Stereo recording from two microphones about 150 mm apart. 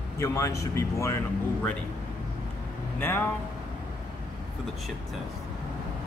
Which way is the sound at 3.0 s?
15° left (ahead or behind).